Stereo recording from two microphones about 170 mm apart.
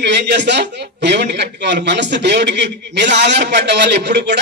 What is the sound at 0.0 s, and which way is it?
A man's voice, 85° right.